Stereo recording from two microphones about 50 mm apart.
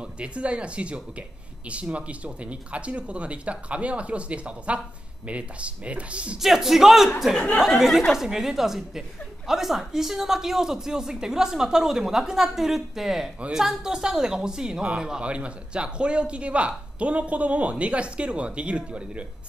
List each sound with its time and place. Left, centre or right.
0.0 s speech: right
6.4 s speech: centre
7.3 s speech: left
8.1 s speech: centre; by 19.2 s right